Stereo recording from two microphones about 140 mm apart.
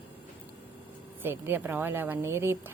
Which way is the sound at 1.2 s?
15° right (ahead or behind).